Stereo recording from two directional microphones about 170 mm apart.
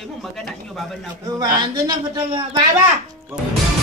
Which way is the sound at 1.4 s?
25° right (ahead or behind).